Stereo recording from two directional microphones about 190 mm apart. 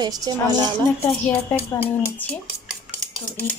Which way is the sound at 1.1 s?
15° left (ahead or behind).